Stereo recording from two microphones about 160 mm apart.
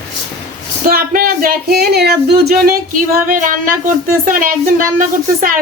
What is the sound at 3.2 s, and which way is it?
Speech, 55° right (ahead or behind).